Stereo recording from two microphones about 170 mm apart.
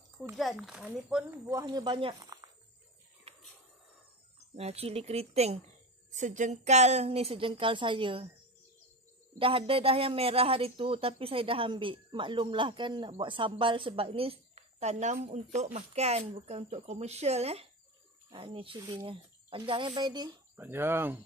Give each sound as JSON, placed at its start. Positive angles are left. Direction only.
{"t": 0.4, "sound": "speech", "side_deg": 0}
{"t": 1.3, "sound": "speech", "side_deg": -20}
{"t": 4.6, "sound": "speech", "side_deg": -35}
{"t": 9.4, "sound": "speech", "side_deg": -30}
{"t": 20.6, "sound": "speech", "side_deg": -15}